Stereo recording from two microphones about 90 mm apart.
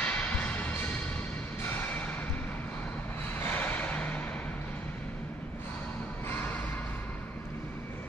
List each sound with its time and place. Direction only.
0.0 s music: 15° left (ahead or behind)
3.4 s music: 20° left (ahead or behind)